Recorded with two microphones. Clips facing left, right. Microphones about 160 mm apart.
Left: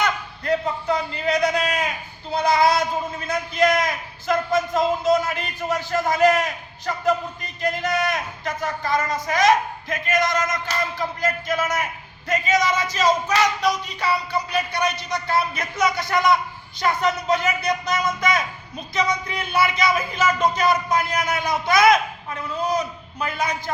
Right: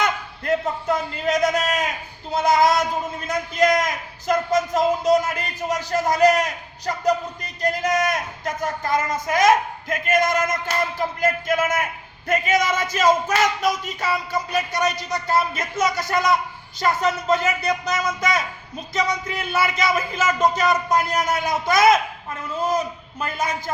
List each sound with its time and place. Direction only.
0.0 s a man's voice: 50° right (ahead or behind)
23.2 s speech: 45° right (ahead or behind)